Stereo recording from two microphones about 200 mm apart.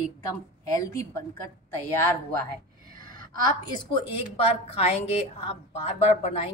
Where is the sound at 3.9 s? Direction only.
30° left (ahead or behind).